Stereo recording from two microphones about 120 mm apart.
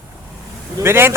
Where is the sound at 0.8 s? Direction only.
20° right (ahead or behind).